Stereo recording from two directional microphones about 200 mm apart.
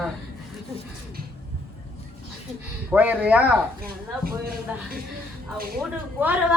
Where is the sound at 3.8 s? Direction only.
45° right (ahead or behind).